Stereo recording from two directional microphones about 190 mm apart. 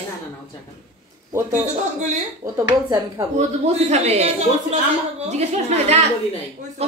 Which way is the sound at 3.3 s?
35° right (ahead or behind).